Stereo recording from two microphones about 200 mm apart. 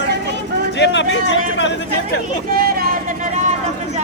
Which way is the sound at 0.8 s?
65° left (ahead or behind).